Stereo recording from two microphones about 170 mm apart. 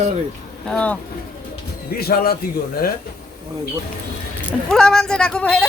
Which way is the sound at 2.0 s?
60° left (ahead or behind).